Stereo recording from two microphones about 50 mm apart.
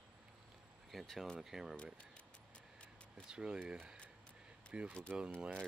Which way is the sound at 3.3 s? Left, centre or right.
Centre.